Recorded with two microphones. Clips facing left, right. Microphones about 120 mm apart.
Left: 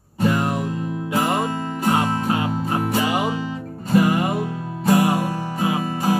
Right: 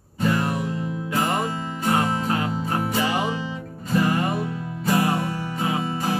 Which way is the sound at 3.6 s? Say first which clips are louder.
Left 4 dB; 40° left (ahead or behind).